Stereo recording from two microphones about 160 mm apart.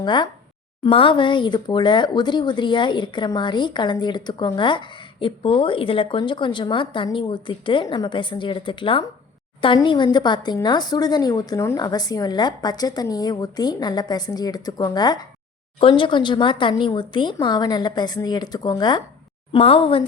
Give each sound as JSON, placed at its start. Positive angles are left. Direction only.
{"t": 0.0, "sound": "speech", "side_deg": 30}
{"t": 19.5, "sound": "speech", "side_deg": 35}